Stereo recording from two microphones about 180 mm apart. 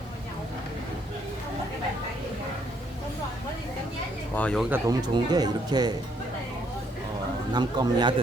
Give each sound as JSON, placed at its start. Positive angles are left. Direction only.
{"t": 4.4, "sound": "speech", "side_deg": 5}
{"t": 4.7, "sound": "speech", "side_deg": -20}
{"t": 7.5, "sound": "speech", "side_deg": -25}